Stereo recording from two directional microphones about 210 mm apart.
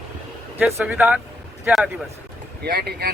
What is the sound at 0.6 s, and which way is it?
A man's voice, 5° right (ahead or behind).